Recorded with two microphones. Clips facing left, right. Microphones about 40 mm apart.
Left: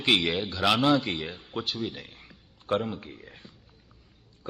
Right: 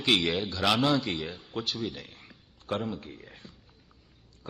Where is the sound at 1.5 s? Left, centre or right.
Centre.